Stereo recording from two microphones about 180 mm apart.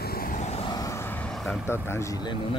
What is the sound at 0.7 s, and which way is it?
Vehicle, 15° left (ahead or behind).